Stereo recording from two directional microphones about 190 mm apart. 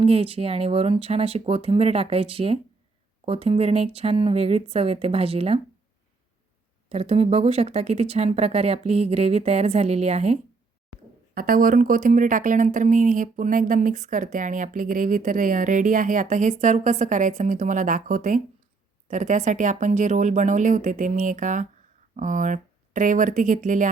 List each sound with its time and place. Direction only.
0.0 s speech: 30° right (ahead or behind)
6.9 s speech: 35° right (ahead or behind)
11.3 s speech: 45° right (ahead or behind)